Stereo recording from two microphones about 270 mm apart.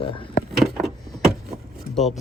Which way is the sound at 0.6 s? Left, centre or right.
Centre.